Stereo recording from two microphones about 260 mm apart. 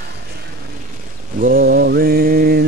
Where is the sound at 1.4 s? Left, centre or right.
Right.